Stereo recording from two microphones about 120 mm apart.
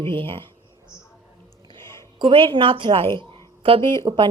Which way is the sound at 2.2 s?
45° right (ahead or behind).